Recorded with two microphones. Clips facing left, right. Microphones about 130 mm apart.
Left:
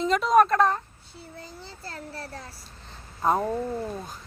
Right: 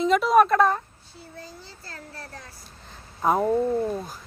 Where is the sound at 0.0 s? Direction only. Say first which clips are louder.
Right 2 dB; 5° right (ahead or behind).